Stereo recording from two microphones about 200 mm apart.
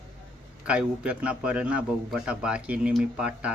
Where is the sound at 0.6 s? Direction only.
5° right (ahead or behind).